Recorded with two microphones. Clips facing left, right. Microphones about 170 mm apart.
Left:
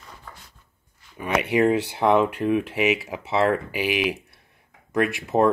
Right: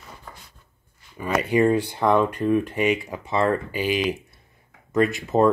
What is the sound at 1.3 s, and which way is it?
Speech, 70° left (ahead or behind).